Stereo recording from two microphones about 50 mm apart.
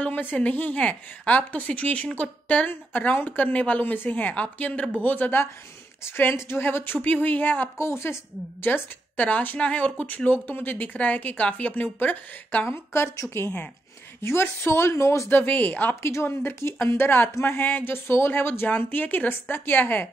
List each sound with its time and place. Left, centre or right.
0.2 s a woman's voice: left
6.0 s a woman's voice: left
7.0 s speech: left
7.7 s speech: left
8.6 s a woman's voice: left
12.7 s a woman's voice: left
13.1 s speech: left
14.2 s a woman's voice: left
15.2 s speech: left
16.0 s speech: left
16.8 s a woman's voice: left